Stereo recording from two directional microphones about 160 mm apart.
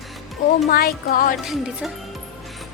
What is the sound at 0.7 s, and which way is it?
Speech, 70° left (ahead or behind).